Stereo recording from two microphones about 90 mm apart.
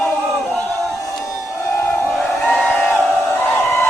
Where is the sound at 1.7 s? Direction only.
30° left (ahead or behind).